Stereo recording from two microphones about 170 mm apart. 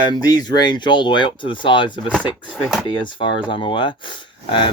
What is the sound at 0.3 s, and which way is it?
Speech, 25° left (ahead or behind).